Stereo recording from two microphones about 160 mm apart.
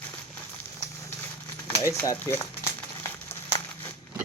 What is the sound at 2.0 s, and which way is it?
Speech, 15° left (ahead or behind).